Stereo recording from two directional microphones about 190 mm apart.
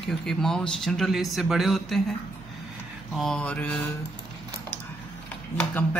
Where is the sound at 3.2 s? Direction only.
5° left (ahead or behind).